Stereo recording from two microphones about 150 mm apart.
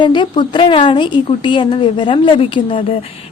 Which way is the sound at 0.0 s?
30° left (ahead or behind).